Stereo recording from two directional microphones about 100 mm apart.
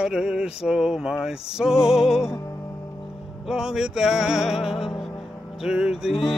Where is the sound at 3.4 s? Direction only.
5° right (ahead or behind).